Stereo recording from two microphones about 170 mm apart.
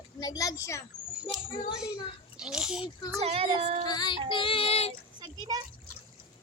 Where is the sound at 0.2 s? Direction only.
20° left (ahead or behind).